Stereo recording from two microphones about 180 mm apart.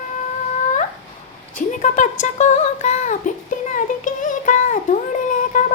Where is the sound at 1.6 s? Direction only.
45° left (ahead or behind).